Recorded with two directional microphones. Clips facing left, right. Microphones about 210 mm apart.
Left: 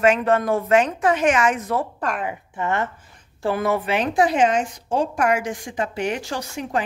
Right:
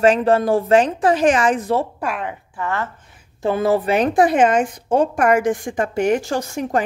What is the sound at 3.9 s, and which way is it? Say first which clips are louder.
A woman's voice: right 3 dB; 50° right (ahead or behind).